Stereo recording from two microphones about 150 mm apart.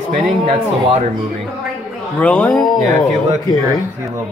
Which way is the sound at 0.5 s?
40° right (ahead or behind).